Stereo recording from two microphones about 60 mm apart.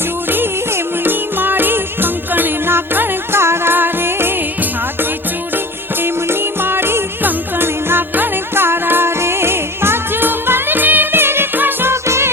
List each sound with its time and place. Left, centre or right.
1.0 s music: right
6.0 s music: right